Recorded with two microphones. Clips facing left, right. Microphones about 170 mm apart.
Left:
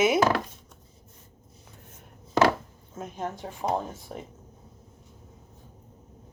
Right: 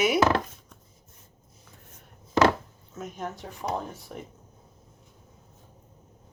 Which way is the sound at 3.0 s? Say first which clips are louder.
Left 2 dB; 30° left (ahead or behind).